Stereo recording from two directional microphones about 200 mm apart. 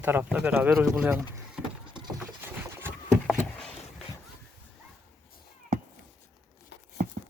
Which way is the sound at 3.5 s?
5° left (ahead or behind).